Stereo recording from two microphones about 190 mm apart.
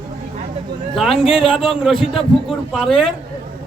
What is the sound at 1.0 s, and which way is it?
Speech, centre (ahead or behind).